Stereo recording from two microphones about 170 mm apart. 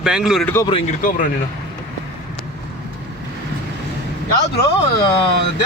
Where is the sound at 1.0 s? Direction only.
50° left (ahead or behind).